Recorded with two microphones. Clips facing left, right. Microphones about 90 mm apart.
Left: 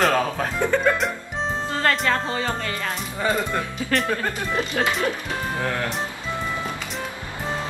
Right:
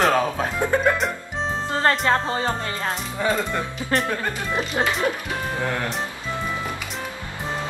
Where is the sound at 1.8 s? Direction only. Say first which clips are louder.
Right 2 dB; 30° right (ahead or behind).